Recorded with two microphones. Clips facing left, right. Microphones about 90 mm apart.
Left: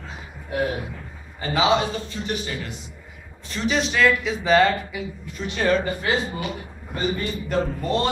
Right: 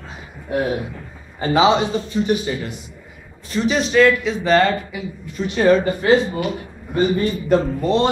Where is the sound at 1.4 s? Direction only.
25° right (ahead or behind).